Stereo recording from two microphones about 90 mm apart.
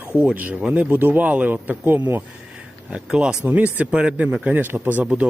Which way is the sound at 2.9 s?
10° right (ahead or behind).